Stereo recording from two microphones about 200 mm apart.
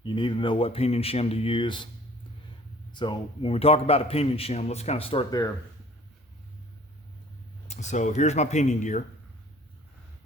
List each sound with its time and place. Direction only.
0.0 s a man's voice: 25° left (ahead or behind)
2.9 s a man's voice: 25° left (ahead or behind)
7.7 s speech: 35° left (ahead or behind)